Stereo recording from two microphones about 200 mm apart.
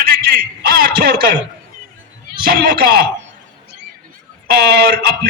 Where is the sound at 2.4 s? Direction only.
50° right (ahead or behind).